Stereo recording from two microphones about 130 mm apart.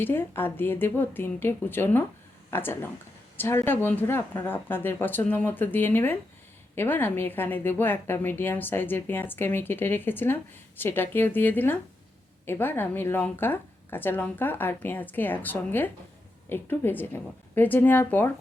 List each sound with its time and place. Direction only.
0.0 s a woman's voice: 15° left (ahead or behind)